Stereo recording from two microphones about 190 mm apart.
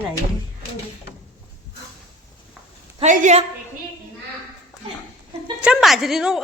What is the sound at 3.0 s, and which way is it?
Speech, 40° right (ahead or behind).